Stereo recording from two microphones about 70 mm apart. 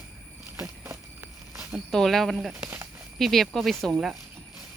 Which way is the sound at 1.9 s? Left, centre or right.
Centre.